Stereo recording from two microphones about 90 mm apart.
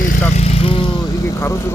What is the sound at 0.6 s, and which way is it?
Speech, 80° left.